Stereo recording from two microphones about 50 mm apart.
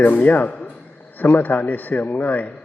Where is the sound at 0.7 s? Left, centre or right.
Left.